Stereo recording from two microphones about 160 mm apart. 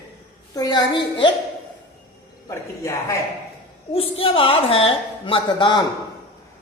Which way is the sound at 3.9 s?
35° left (ahead or behind).